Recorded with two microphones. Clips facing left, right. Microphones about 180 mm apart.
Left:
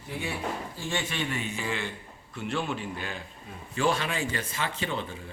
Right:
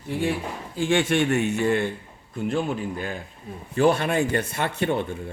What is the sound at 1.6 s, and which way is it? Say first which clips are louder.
Speech: right 10 dB; 60° right (ahead or behind).